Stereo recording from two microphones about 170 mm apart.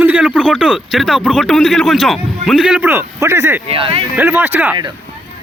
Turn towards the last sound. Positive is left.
turn(degrees=-10)  # may be behind; listen again after turning